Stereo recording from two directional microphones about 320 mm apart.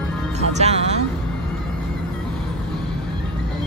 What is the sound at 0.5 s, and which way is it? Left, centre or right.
Speech, centre.